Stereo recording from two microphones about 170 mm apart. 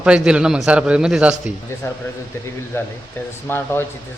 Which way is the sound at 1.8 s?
15° left (ahead or behind).